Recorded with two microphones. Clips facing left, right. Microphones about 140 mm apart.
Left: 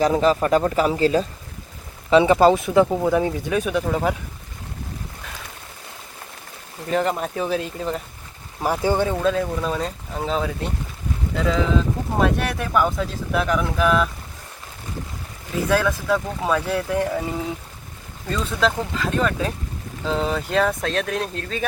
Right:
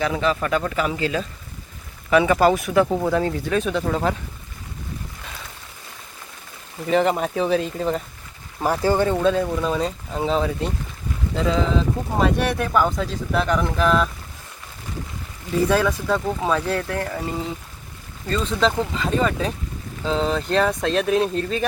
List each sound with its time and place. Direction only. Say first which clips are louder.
0.0 s speech: left 4 dB; 35° left (ahead or behind)
2.0 s speech: left 2 dB; 25° left (ahead or behind)
2.9 s speech: left 1 dB; 10° left (ahead or behind)
6.8 s speech: right 3 dB; centre (ahead or behind)
8.6 s speech: right 1 dB; 15° left (ahead or behind)
9.0 s speech: right 2 dB; centre (ahead or behind)
15.7 s speech: left 4 dB; centre (ahead or behind)
18.3 s speech: right 1 dB; centre (ahead or behind)